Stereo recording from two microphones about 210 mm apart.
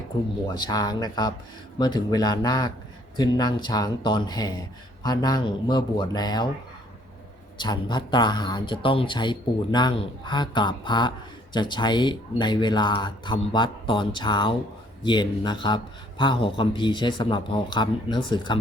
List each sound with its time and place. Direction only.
0.5 s speech: 20° left (ahead or behind)
7.6 s speech: 20° left (ahead or behind)